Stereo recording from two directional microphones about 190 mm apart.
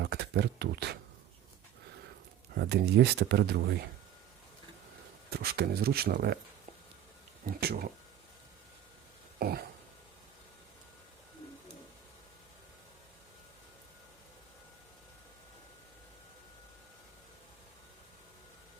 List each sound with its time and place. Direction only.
0.0 s speech: 60° right (ahead or behind)
2.6 s speech: 60° right (ahead or behind)
5.3 s speech: 55° right (ahead or behind)
7.4 s speech: 50° right (ahead or behind)
9.4 s speech: 50° right (ahead or behind)